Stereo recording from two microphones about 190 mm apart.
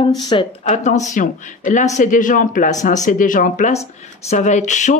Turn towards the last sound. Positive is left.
turn(degrees=40)  # may be behind; listen again after turning